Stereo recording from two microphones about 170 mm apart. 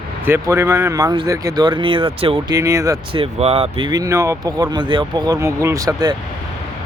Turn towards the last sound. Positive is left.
turn(degrees=-20)  # may be behind; listen again after turning